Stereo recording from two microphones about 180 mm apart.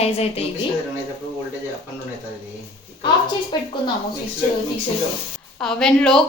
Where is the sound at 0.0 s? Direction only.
35° left (ahead or behind).